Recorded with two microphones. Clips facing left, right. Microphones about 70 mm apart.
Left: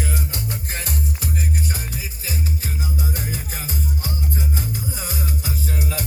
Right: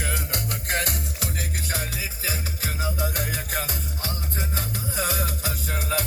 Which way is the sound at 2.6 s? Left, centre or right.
Right.